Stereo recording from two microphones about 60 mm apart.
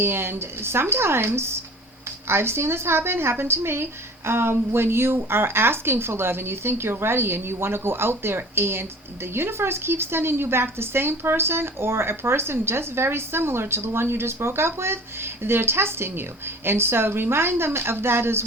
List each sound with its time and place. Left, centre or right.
0.0 s speech: right